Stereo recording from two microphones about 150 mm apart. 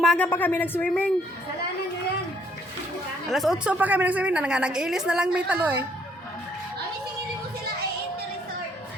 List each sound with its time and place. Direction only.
0.0 s speech: centre (ahead or behind)
0.3 s speech: 15° left (ahead or behind)
3.2 s a woman's voice: centre (ahead or behind)